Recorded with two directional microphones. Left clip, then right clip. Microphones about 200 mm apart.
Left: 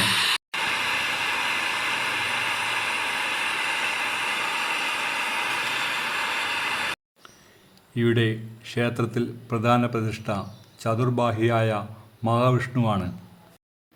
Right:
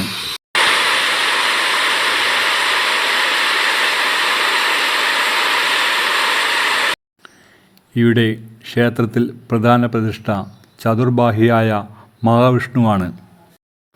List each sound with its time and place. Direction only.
0.5 s waterfall: 60° right (ahead or behind)
7.9 s speech: 30° right (ahead or behind)